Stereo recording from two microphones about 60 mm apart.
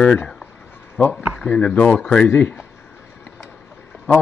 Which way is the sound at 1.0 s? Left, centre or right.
Left.